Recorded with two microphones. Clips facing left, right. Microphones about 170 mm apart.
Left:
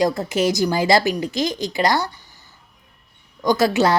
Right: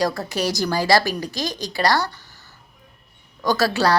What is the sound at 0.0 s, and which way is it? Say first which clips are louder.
A woman's voice: left 4 dB; 20° left (ahead or behind).